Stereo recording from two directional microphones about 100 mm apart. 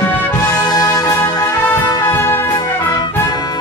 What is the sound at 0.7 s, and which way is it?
Music, 40° left (ahead or behind).